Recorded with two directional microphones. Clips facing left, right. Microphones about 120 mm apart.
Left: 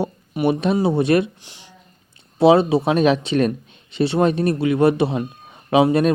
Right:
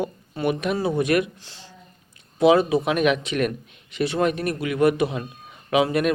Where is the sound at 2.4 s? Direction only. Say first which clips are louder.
Left 3 dB; 30° left (ahead or behind).